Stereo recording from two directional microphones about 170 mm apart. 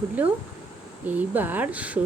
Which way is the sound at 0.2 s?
10° right (ahead or behind).